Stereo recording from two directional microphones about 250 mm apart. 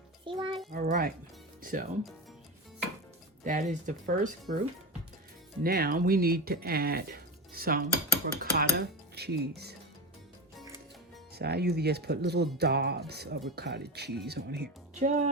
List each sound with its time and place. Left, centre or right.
0.3 s a child's voice: centre
0.7 s music: right
1.6 s speech: right
3.4 s speech: right
5.6 s speech: right
8.4 s dishes: right
11.3 s speech: right
14.9 s speech: right